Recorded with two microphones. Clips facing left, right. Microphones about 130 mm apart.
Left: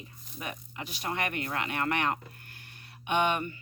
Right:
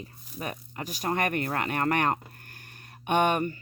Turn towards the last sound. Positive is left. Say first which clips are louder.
# right 4 dB
turn(degrees=-45)  # may be behind; listen again after turning